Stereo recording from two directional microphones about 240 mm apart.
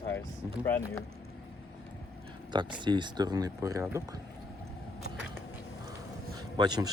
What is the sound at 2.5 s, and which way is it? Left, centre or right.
Speech, centre.